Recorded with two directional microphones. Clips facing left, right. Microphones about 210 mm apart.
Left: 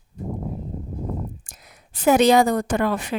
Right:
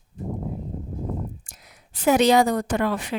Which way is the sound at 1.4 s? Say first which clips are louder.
Left 2 dB; 50° left (ahead or behind).